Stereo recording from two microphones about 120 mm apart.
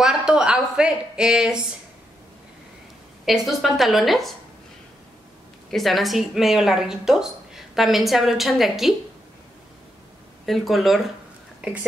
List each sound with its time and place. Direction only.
0.0 s a sound: 5° right (ahead or behind)
3.3 s a woman's voice: centre (ahead or behind)
5.7 s a woman's voice: centre (ahead or behind)
10.4 s a woman's voice: centre (ahead or behind)